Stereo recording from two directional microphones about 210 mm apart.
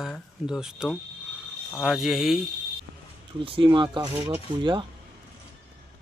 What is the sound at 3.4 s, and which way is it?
Speech, 25° right (ahead or behind).